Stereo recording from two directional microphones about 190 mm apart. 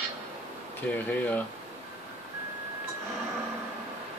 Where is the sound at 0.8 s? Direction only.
10° left (ahead or behind).